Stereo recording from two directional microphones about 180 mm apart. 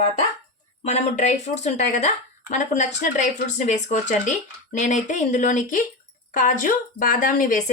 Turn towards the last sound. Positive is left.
turn(degrees=45)  # may be behind; listen again after turning